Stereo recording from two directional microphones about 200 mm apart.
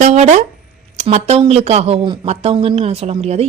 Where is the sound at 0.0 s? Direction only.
35° right (ahead or behind).